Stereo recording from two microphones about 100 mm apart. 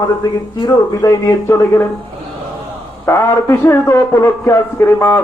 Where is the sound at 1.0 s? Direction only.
30° left (ahead or behind).